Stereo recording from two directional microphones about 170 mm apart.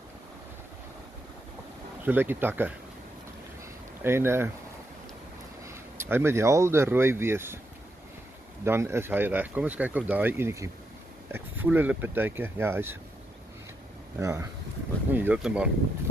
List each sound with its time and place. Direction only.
2.0 s speech: 10° right (ahead or behind)
4.0 s speech: 15° right (ahead or behind)
5.6 s speech: 15° right (ahead or behind)
8.6 s speech: 15° right (ahead or behind)
14.2 s speech: 20° right (ahead or behind)